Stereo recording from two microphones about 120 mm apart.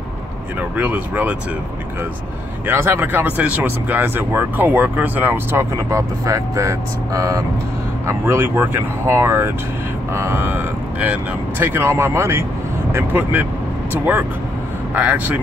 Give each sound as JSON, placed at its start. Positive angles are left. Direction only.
{"t": 0.6, "sound": "speech", "side_deg": -10}
{"t": 2.6, "sound": "speech", "side_deg": -20}
{"t": 15.0, "sound": "speech", "side_deg": -10}